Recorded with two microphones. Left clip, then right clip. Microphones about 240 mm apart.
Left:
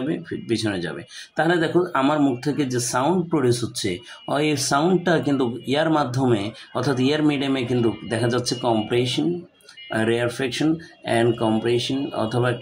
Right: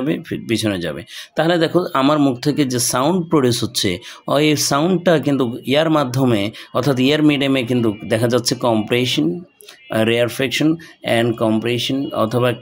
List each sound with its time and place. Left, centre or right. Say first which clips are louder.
0.1 s speech: right 4 dB; right